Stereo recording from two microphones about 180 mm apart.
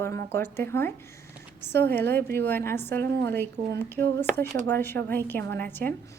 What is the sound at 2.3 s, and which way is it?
Speech, 10° left (ahead or behind).